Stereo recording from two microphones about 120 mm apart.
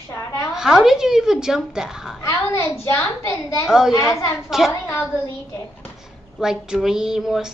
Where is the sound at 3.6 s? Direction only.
5° right (ahead or behind).